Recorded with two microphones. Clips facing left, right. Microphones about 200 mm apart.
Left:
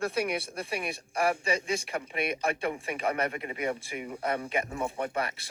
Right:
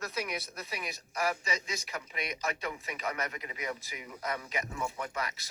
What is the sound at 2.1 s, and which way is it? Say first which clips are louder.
Speech: left 6 dB; 60° left (ahead or behind).